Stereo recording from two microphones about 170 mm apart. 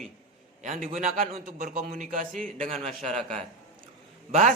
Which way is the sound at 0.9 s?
40° right (ahead or behind).